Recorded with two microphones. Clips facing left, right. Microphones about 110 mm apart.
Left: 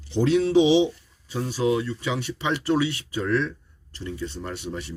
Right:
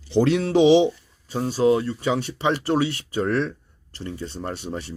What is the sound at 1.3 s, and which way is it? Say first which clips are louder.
Speech: right 4 dB; 40° right (ahead or behind).